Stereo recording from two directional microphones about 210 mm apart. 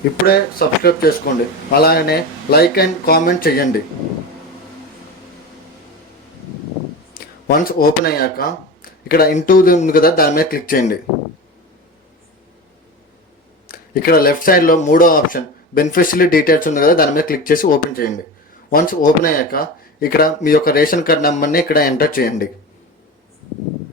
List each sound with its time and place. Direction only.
0.3 s speech: 45° left (ahead or behind)
7.1 s speech: 40° left (ahead or behind)
13.7 s speech: 45° left (ahead or behind)